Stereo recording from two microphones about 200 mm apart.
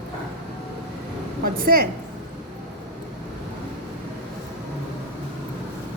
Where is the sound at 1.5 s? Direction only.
50° right (ahead or behind).